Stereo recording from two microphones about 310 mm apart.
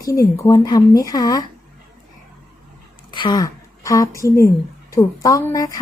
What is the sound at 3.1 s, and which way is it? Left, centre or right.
A woman's voice, centre.